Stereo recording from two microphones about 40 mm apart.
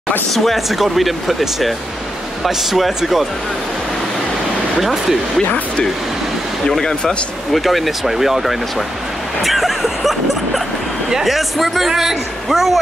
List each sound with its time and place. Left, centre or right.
0.3 s a man's voice: centre
4.7 s a man's voice: centre
6.8 s speech: centre
7.5 s a man's voice: centre